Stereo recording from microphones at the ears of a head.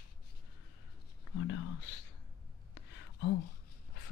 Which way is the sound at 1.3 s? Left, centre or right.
Left.